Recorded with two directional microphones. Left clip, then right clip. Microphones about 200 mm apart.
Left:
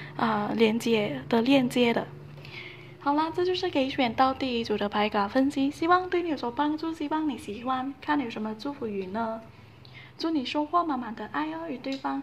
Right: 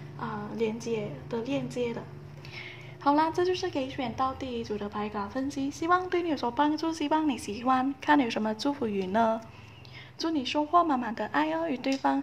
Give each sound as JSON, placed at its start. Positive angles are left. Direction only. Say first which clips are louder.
{"t": 0.2, "sound": "a woman's voice", "louder": "left 8 dB", "side_deg": 30}
{"t": 3.0, "sound": "a woman's voice", "louder": "right 1 dB", "side_deg": -5}
{"t": 5.8, "sound": "a woman's voice", "louder": "left 2 dB", "side_deg": 5}
{"t": 10.1, "sound": "a woman's voice", "louder": "left 1 dB", "side_deg": 5}